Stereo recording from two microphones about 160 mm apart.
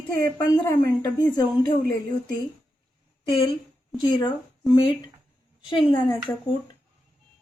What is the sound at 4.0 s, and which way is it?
Speech, 30° left (ahead or behind).